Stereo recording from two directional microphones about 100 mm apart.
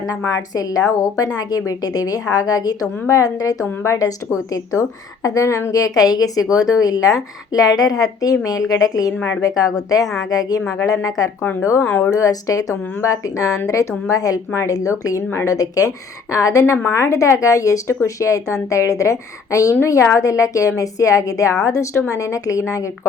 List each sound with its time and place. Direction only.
0.5 s a woman's voice: 35° left (ahead or behind)
9.1 s a woman's voice: 20° left (ahead or behind)
9.4 s a woman's voice: 35° left (ahead or behind)
11.8 s speech: 15° left (ahead or behind)
12.1 s a woman's voice: 35° left (ahead or behind)